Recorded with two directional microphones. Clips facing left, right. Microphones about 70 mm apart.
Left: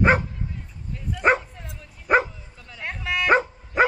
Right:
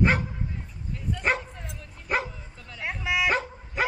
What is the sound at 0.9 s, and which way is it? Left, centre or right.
Dog, centre.